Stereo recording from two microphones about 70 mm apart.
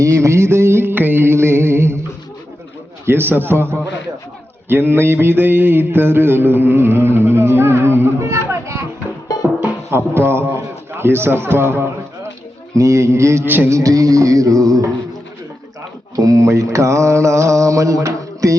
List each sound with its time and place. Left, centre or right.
0.0 s music: right
3.1 s mantra: right
9.9 s mantra: right
12.7 s mantra: right
13.4 s music: right
13.7 s music: right
16.1 s mantra: right